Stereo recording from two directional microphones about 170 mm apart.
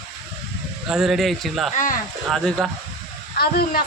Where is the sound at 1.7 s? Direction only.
50° left (ahead or behind).